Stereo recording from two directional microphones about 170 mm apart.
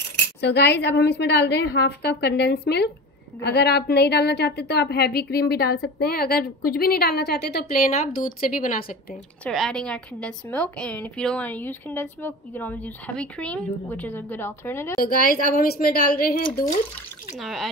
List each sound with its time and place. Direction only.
0.4 s a woman's voice: 80° left; by 8.8 s 55° left (ahead or behind)
9.4 s a woman's voice: 5° left (ahead or behind)
15.0 s a woman's voice: 60° left (ahead or behind)
17.4 s speech: centre (ahead or behind)